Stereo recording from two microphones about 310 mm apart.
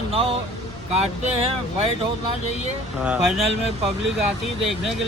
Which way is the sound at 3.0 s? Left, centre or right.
Centre.